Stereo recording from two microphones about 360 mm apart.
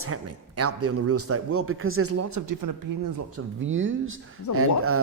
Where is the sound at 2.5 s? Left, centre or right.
Right.